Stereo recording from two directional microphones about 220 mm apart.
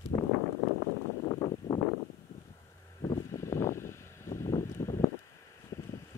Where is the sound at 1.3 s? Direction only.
20° left (ahead or behind).